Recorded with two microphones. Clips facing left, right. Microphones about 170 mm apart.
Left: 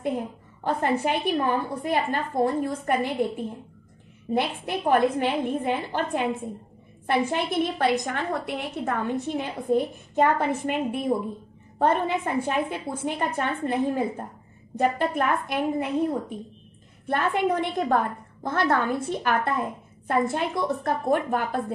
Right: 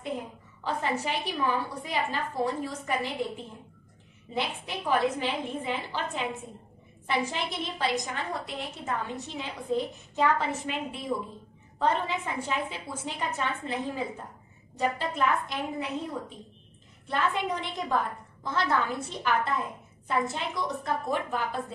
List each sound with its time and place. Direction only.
0.7 s a woman's voice: 55° left (ahead or behind)